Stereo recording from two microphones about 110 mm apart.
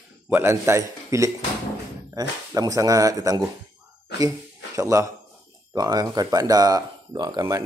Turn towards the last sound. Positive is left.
turn(degrees=-40)  # may be behind; listen again after turning